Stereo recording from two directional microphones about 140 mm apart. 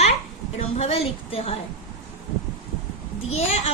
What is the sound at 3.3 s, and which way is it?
Speech, 50° left (ahead or behind).